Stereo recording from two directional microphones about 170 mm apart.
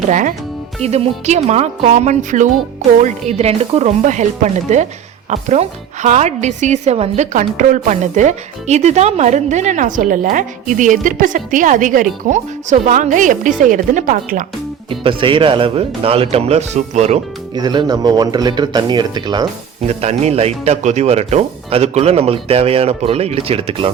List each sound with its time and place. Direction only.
0.1 s a woman's voice: 50° right (ahead or behind)
14.8 s speech: 30° right (ahead or behind)
17.5 s speech: 25° right (ahead or behind)
19.9 s speech: 40° right (ahead or behind)